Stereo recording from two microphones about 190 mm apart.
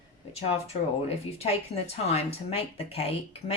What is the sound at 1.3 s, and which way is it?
Speech, 35° left (ahead or behind).